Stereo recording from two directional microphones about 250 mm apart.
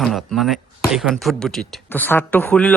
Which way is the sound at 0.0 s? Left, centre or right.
Centre.